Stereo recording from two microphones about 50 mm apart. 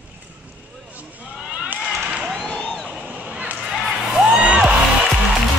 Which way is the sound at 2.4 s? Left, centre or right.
Left.